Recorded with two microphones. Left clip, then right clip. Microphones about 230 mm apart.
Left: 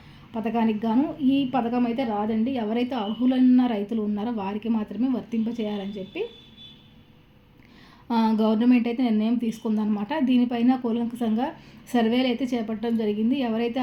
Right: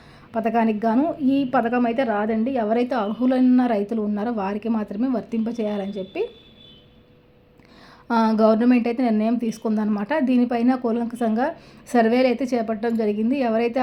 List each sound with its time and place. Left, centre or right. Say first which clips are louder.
0.3 s a woman's voice: right 5 dB; centre
8.0 s a woman's voice: right 6 dB; centre